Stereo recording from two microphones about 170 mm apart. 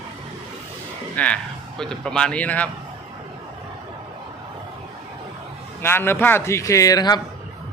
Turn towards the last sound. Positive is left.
turn(degrees=25)  # may be behind; listen again after turning